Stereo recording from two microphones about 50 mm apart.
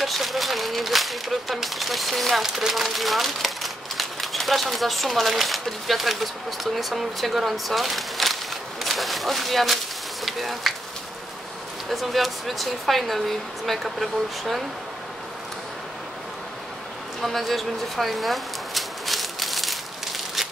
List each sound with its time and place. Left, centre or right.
0.0 s speech: centre
11.9 s speech: centre
17.2 s a sound: centre